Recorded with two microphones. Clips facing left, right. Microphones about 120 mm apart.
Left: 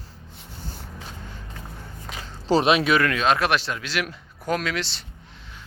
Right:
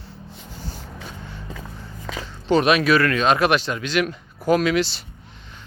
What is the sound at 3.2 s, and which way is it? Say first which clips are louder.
Speech: right 3 dB; centre (ahead or behind).